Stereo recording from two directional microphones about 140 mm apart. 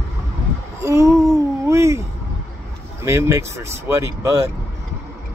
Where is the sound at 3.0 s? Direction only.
20° right (ahead or behind).